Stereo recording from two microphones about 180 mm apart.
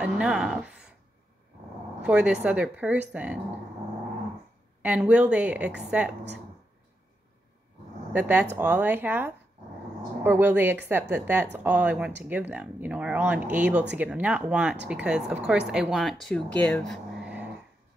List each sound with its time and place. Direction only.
0.0 s speech: 5° right (ahead or behind)
2.0 s speech: 5° right (ahead or behind)
4.8 s speech: 10° right (ahead or behind)
8.1 s speech: 10° right (ahead or behind)